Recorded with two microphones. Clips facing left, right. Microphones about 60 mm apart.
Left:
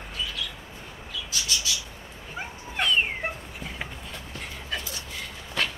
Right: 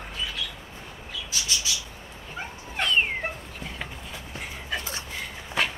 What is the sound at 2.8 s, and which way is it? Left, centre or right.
Cat, centre.